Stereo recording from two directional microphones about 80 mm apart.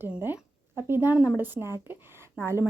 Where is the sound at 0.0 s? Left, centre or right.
Right.